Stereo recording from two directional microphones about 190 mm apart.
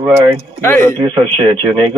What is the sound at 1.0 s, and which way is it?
Speech, 25° right (ahead or behind).